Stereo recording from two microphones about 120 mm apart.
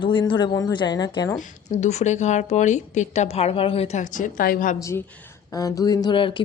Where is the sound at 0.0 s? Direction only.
45° left (ahead or behind).